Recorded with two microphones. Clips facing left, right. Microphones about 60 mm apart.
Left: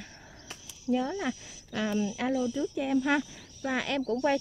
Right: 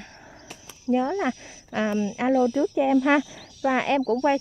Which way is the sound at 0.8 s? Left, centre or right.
Right.